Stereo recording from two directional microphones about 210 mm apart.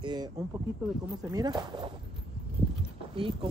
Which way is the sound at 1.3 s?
20° right (ahead or behind).